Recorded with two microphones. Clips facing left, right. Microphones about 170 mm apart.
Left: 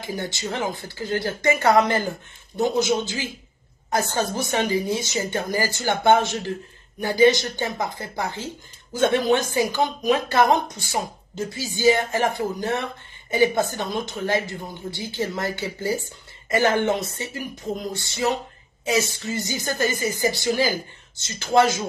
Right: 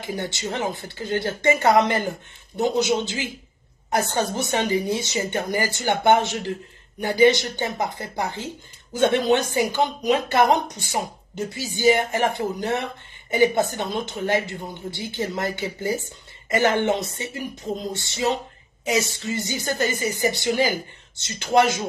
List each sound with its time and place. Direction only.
0.0 s speech: 25° right (ahead or behind)
21.5 s speech: 20° right (ahead or behind)